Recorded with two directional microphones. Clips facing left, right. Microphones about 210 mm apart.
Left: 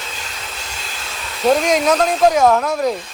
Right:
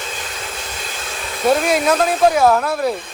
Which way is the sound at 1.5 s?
5° right (ahead or behind).